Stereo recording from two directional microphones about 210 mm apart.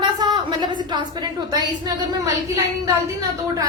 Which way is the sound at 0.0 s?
20° right (ahead or behind).